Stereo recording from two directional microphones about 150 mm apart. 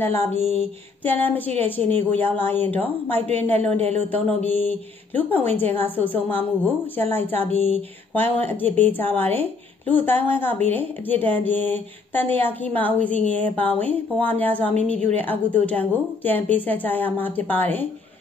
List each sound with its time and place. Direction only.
0.0 s a woman's voice: 15° left (ahead or behind)
3.7 s speech: 45° right (ahead or behind)
4.5 s a woman's voice: 10° left (ahead or behind)